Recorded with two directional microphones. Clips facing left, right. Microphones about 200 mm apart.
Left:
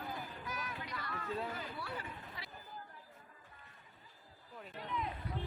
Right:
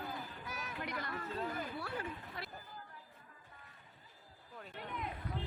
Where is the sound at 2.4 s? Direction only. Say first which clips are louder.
Right 5 dB; 60° right (ahead or behind).